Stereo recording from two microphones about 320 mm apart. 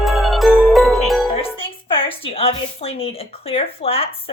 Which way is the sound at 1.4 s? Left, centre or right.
Centre.